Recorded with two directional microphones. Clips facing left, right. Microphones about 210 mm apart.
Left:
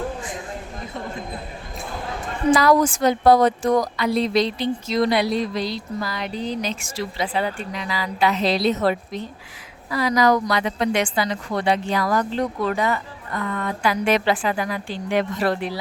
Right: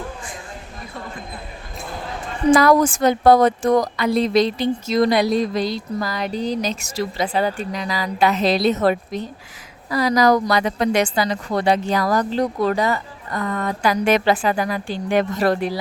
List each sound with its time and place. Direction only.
2.5 s a woman's voice: 50° right (ahead or behind)